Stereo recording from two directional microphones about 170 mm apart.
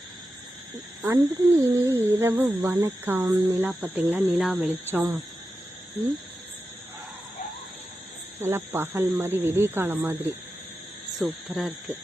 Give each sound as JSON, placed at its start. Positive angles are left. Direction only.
{"t": 1.0, "sound": "speech", "side_deg": -15}
{"t": 8.4, "sound": "speech", "side_deg": -15}
{"t": 11.2, "sound": "speech", "side_deg": 0}